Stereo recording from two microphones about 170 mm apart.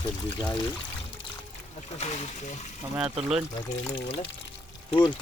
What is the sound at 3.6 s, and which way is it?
Speech, 25° left (ahead or behind).